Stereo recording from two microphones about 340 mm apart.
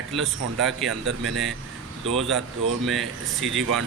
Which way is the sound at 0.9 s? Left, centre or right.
Right.